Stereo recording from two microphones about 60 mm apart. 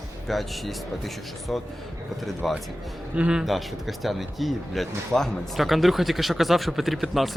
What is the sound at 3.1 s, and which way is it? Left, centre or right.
Speech, centre.